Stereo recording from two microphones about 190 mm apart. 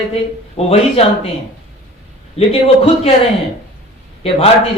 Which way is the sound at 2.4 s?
30° left (ahead or behind).